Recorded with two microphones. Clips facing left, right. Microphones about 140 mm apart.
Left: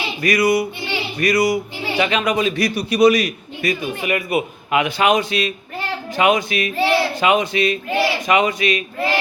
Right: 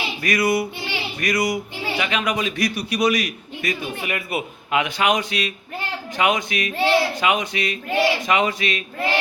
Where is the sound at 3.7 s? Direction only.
15° left (ahead or behind).